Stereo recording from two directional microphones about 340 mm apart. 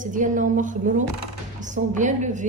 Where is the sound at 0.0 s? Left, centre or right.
Right.